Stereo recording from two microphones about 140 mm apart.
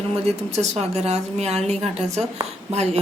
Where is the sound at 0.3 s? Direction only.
50° right (ahead or behind).